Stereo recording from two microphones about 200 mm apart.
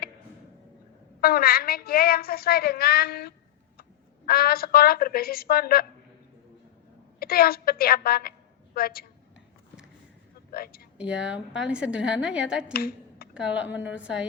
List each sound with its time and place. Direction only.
1.2 s a woman's voice: 50° left (ahead or behind)
7.2 s a woman's voice: 50° left (ahead or behind)
10.5 s a woman's voice: 50° left (ahead or behind)
10.9 s a woman's voice: 5° right (ahead or behind)
12.7 s a sound: 50° left (ahead or behind)
13.3 s a woman's voice: 5° right (ahead or behind)